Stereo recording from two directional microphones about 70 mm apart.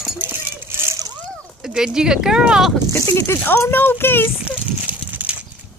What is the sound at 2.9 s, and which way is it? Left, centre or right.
Speech, left.